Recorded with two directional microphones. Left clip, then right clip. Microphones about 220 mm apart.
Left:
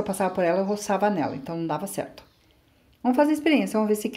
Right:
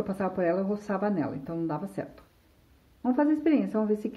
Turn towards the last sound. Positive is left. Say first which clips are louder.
# left 4 dB
turn(degrees=20)  # may be behind; listen again after turning